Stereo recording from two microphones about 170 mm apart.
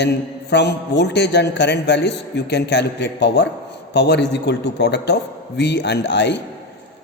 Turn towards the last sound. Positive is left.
turn(degrees=90)